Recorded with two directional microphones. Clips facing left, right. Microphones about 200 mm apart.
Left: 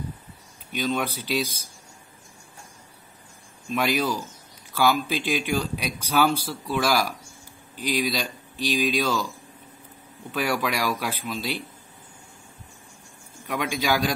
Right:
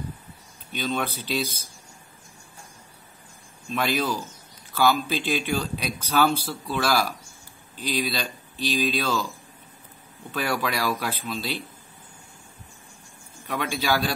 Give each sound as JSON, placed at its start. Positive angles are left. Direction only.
{"t": 0.7, "sound": "speech", "side_deg": 10}
{"t": 3.7, "sound": "speech", "side_deg": 10}
{"t": 10.3, "sound": "speech", "side_deg": 10}
{"t": 13.5, "sound": "speech", "side_deg": 15}